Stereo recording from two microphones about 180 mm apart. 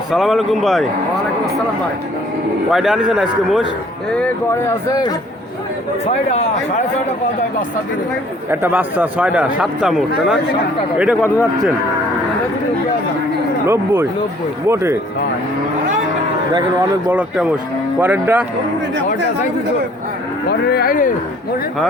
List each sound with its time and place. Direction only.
0.1 s a man's voice: centre (ahead or behind)
2.7 s a man's voice: centre (ahead or behind)
4.1 s speech: 10° left (ahead or behind)
8.4 s a man's voice: 10° right (ahead or behind)
13.7 s a man's voice: 15° right (ahead or behind)
16.6 s a man's voice: 15° right (ahead or behind)
20.5 s speech: 65° left (ahead or behind)